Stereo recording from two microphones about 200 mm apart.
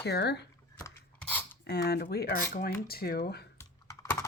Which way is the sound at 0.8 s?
10° left (ahead or behind).